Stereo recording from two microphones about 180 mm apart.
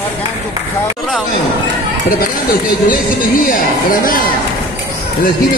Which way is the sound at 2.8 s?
50° left (ahead or behind).